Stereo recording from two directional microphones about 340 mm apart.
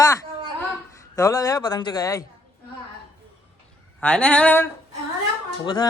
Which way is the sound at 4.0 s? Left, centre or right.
Centre.